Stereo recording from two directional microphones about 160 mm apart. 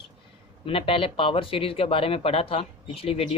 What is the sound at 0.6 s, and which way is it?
Speech, 35° left (ahead or behind).